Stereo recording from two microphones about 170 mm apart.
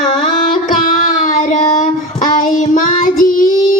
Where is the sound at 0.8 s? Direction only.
50° left (ahead or behind).